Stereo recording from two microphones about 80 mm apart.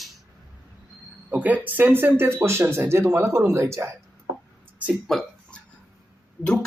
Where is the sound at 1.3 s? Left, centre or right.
Centre; by 3.9 s right.